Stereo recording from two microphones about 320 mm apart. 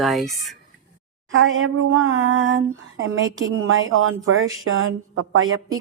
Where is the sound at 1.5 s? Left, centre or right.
Right.